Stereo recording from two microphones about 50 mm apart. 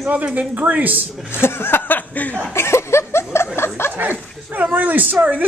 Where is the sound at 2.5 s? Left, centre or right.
Left.